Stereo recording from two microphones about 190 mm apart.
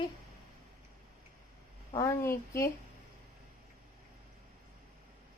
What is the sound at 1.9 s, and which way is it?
Speech, 15° left (ahead or behind).